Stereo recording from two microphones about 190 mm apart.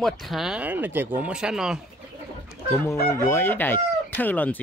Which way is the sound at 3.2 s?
10° left (ahead or behind).